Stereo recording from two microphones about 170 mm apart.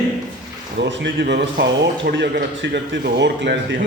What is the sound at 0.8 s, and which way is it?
Speech, 90° right.